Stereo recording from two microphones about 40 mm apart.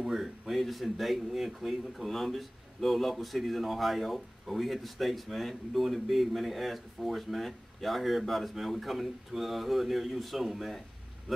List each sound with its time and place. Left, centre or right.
0.1 s speech: centre